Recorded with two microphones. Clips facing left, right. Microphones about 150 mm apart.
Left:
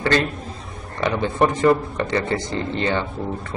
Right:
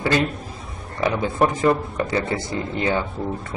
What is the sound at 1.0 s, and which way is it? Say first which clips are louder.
A man's voice: even; 5° right (ahead or behind).